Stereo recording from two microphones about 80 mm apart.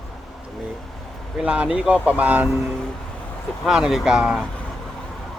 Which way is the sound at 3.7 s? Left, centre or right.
Centre.